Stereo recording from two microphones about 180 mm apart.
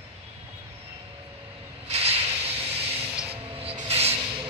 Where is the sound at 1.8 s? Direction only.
35° right (ahead or behind).